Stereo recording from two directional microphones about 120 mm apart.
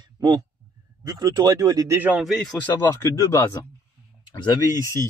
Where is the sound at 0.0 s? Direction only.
30° right (ahead or behind).